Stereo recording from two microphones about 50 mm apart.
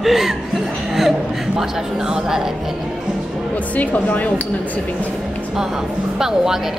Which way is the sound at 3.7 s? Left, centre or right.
Left.